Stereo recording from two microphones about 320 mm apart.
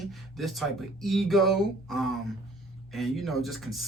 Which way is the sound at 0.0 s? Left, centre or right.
Centre.